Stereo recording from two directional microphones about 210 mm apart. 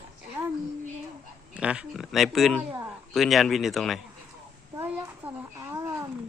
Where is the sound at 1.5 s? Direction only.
5° right (ahead or behind).